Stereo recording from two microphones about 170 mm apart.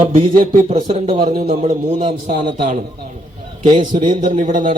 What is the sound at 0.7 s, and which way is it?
Speech, 30° right (ahead or behind).